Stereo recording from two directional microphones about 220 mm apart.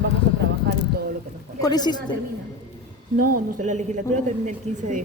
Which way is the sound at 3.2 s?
40° right (ahead or behind).